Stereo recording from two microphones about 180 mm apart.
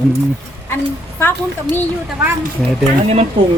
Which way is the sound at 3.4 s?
25° right (ahead or behind).